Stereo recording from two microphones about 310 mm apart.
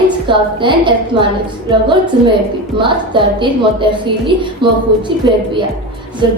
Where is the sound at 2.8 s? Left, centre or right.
Centre.